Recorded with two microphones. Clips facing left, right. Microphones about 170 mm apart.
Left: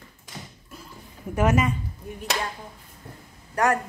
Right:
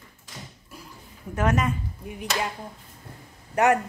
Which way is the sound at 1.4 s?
5° left (ahead or behind).